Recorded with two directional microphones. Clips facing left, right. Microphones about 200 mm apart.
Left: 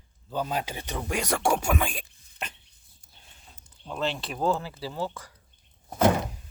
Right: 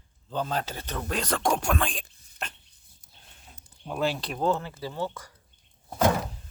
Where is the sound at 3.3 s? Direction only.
5° right (ahead or behind).